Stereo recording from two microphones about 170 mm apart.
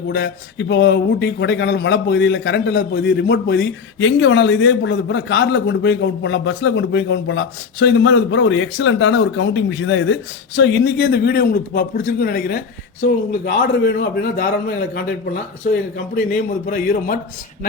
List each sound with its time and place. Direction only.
0.1 s a man's voice: 85° left
16.1 s a man's voice: 60° left (ahead or behind)